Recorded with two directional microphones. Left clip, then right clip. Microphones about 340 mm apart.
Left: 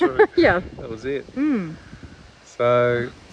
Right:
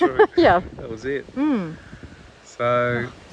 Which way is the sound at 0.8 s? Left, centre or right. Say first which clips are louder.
Even; centre.